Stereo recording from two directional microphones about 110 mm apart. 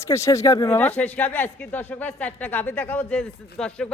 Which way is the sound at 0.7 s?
15° left (ahead or behind).